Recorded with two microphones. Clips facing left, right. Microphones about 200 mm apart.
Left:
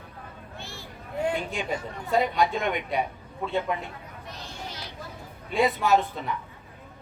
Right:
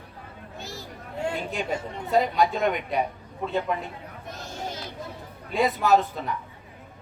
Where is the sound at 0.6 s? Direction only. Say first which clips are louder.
Right 5 dB; 40° right (ahead or behind).